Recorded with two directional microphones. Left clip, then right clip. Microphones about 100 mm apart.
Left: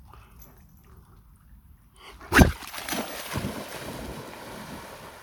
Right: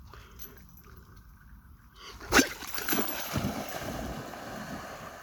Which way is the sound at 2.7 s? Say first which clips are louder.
Even; 5° left (ahead or behind).